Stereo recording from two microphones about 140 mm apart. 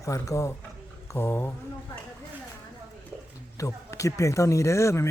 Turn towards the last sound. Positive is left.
turn(degrees=20)  # may be behind; listen again after turning